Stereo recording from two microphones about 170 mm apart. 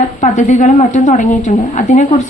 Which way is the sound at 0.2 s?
45° left (ahead or behind).